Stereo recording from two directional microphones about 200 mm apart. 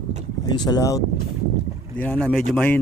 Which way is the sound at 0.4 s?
20° left (ahead or behind).